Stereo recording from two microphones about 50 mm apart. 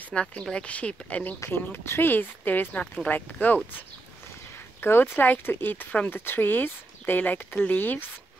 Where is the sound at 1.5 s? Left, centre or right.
Left.